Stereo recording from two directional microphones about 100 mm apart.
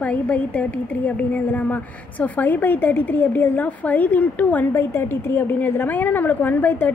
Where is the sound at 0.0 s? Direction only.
15° left (ahead or behind).